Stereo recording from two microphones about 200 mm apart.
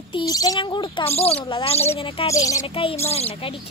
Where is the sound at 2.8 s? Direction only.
30° left (ahead or behind).